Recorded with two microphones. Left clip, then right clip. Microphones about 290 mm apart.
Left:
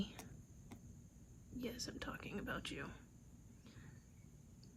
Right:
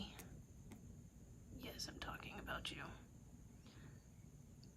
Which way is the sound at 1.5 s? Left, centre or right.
Centre.